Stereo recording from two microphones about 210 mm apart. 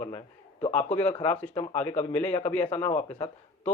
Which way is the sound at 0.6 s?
35° left (ahead or behind).